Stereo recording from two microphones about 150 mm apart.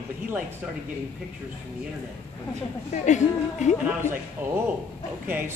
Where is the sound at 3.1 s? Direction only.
55° left (ahead or behind).